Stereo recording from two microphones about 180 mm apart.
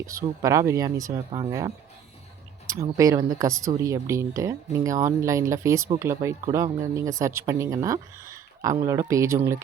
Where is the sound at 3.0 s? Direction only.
20° right (ahead or behind).